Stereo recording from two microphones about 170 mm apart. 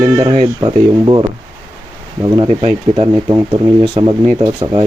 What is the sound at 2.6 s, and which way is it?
Speech, 35° right (ahead or behind).